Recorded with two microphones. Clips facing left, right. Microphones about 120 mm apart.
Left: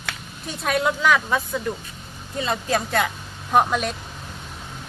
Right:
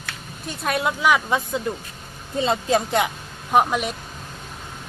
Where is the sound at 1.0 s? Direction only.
15° right (ahead or behind).